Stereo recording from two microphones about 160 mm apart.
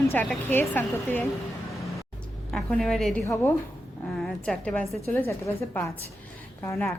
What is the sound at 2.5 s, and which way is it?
Speech, 5° left (ahead or behind).